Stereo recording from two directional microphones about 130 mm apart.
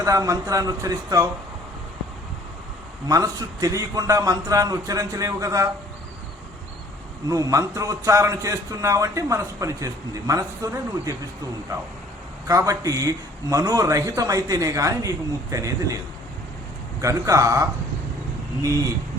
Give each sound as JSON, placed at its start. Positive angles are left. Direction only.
{"t": 0.0, "sound": "a man's voice", "side_deg": -25}
{"t": 3.1, "sound": "a man's voice", "side_deg": -30}
{"t": 7.3, "sound": "a man's voice", "side_deg": -25}
{"t": 12.5, "sound": "a man's voice", "side_deg": -25}
{"t": 17.0, "sound": "a man's voice", "side_deg": -25}